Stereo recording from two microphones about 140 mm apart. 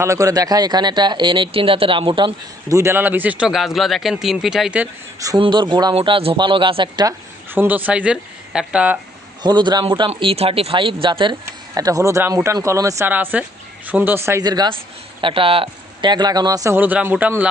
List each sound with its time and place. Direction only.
0.0 s speech: 20° right (ahead or behind)
2.6 s speech: 20° right (ahead or behind)
5.4 s speech: 35° right (ahead or behind)
5.9 s speech: 40° right (ahead or behind)
7.5 s speech: 15° right (ahead or behind)
9.4 s speech: 30° right (ahead or behind)
11.7 s speech: 25° right (ahead or behind)
14.4 s speech: 30° right (ahead or behind)
15.2 s speech: 40° right (ahead or behind); by 17.5 s 10° right (ahead or behind)